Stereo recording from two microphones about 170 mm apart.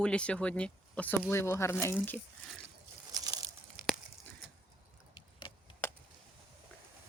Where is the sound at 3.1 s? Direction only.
20° right (ahead or behind).